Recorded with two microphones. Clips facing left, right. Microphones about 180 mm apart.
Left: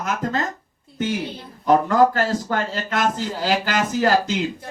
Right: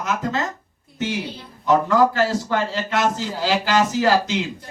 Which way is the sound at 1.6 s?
45° left (ahead or behind).